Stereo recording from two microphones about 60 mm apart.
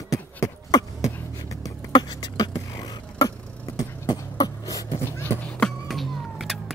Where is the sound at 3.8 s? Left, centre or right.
Left.